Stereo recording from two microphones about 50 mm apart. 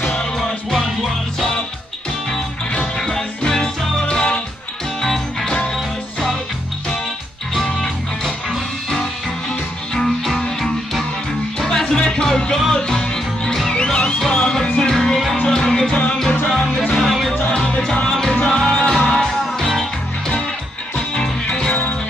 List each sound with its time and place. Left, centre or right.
0.4 s music: centre
3.0 s music: centre
5.0 s music: centre
7.5 s music: centre
9.9 s music: centre
15.4 s music: centre
16.9 s music: centre
17.5 s music: centre
18.3 s music: left
18.6 s music: centre
21.5 s music: centre